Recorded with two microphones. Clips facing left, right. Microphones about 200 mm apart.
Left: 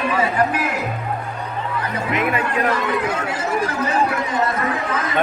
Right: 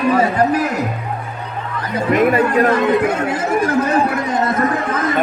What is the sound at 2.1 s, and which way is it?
Speech, 45° right (ahead or behind).